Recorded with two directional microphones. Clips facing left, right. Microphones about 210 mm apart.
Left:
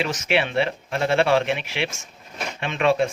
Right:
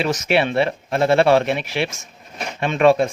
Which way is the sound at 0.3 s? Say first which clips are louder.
Right 3 dB; 40° right (ahead or behind).